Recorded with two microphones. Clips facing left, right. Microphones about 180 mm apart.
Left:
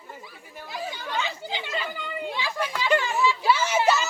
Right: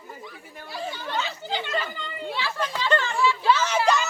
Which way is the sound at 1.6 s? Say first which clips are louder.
Right 2 dB; 10° left (ahead or behind).